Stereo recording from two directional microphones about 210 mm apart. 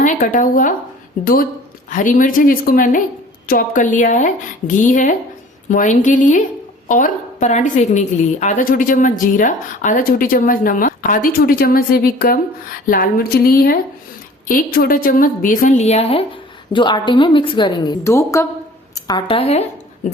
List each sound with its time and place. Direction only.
0.0 s a woman's voice: 40° left (ahead or behind)